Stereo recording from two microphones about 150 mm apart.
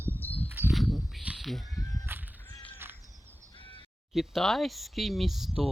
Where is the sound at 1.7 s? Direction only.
25° left (ahead or behind).